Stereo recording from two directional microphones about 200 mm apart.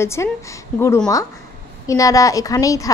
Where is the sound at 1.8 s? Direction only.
15° left (ahead or behind).